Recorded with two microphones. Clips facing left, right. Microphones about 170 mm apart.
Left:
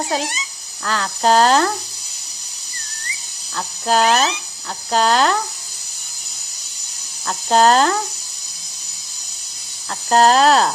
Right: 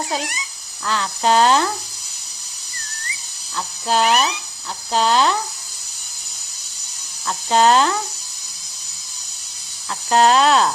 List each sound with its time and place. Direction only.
0.2 s speech: 25° left (ahead or behind)
0.9 s speech: 45° left (ahead or behind)
3.5 s speech: 50° left (ahead or behind)
4.0 s speech: 90° left
4.9 s speech: 50° left (ahead or behind)
7.3 s speech: 45° left (ahead or behind)
10.1 s speech: 40° left (ahead or behind)